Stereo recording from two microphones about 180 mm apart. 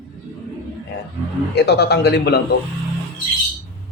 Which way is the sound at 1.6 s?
65° left (ahead or behind).